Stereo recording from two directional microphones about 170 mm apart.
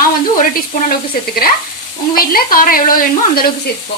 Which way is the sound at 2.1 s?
60° left (ahead or behind).